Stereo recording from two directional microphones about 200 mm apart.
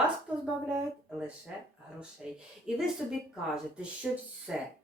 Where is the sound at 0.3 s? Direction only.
5° right (ahead or behind).